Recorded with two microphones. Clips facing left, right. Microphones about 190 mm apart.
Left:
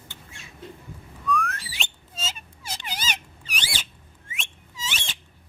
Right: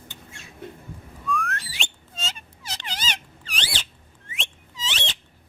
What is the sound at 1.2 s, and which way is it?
Whistling, centre (ahead or behind).